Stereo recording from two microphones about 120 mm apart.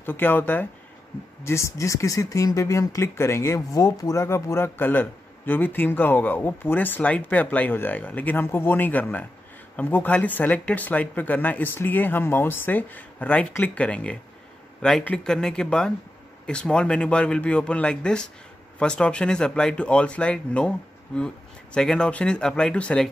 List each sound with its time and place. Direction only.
0.0 s speech: 15° left (ahead or behind)